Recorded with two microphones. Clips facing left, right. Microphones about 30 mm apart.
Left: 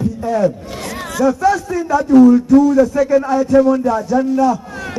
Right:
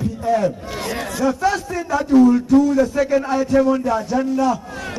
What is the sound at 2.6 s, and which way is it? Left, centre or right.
Speech, centre.